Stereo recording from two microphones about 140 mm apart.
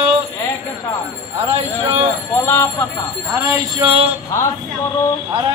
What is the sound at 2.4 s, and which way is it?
Speech, 20° left (ahead or behind).